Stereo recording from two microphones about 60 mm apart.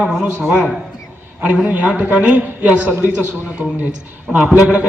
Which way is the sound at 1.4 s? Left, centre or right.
Right.